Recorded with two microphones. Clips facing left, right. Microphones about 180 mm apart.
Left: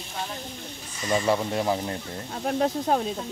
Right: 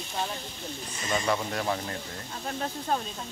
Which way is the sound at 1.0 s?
25° left (ahead or behind).